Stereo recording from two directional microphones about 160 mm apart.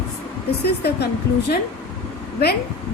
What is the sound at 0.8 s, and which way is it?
Speech, 90° left.